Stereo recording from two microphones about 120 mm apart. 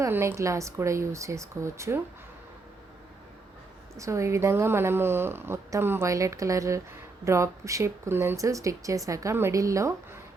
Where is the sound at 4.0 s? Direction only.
25° right (ahead or behind).